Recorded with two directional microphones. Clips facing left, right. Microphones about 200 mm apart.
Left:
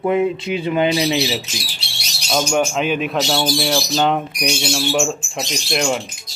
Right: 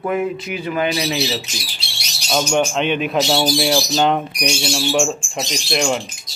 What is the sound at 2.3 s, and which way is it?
Speech, 5° left (ahead or behind).